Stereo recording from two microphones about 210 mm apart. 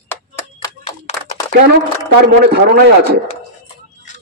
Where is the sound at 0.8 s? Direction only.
30° left (ahead or behind).